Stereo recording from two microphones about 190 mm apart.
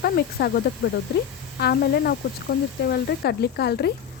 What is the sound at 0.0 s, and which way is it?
A woman's voice, 55° left (ahead or behind).